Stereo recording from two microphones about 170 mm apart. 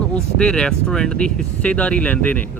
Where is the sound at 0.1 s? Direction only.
5° left (ahead or behind).